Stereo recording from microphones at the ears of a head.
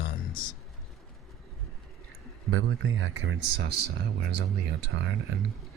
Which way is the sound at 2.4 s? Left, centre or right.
Right.